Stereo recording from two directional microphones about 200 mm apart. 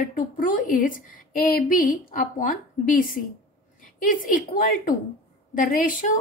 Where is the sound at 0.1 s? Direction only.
40° left (ahead or behind).